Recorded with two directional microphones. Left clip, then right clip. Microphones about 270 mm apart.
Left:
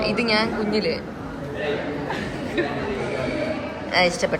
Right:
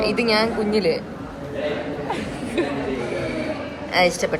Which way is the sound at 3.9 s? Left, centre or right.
Centre.